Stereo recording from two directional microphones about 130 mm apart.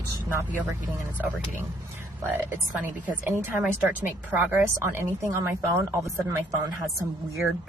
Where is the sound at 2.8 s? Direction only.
15° right (ahead or behind).